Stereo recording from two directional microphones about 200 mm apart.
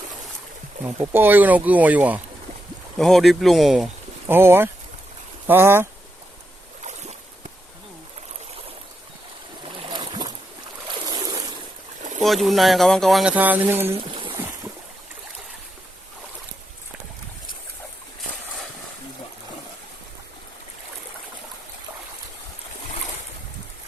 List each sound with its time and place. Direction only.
0.9 s speech: 10° right (ahead or behind)
9.6 s boat: 25° right (ahead or behind)
12.2 s speech: centre (ahead or behind)
13.9 s a sound: 25° right (ahead or behind)